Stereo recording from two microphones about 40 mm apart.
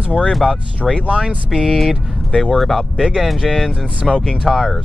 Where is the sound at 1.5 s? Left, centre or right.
Centre.